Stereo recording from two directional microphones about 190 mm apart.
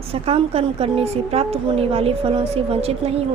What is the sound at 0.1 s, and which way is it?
A woman's voice, 30° right (ahead or behind).